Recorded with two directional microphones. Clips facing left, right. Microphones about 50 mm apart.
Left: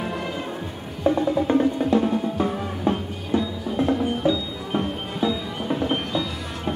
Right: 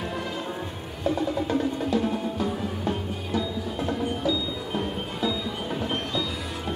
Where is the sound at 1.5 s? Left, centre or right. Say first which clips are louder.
Left 7 dB; left.